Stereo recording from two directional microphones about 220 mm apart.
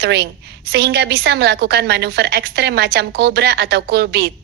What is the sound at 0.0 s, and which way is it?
A woman's voice, 50° right (ahead or behind).